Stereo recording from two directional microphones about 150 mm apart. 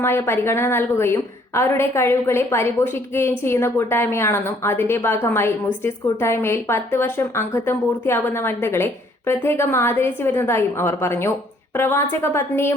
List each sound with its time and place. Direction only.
0.0 s speech: 15° left (ahead or behind)